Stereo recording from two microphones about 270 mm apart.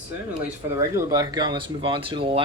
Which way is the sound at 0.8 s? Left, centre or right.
Centre.